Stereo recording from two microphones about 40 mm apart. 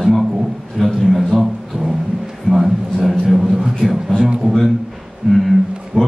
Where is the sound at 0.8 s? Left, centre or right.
Centre.